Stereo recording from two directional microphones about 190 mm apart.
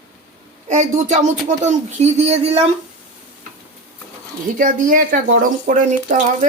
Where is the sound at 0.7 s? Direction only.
40° right (ahead or behind).